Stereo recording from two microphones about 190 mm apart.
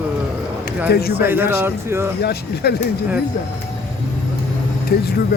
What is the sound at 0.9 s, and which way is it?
Speech, 55° left (ahead or behind).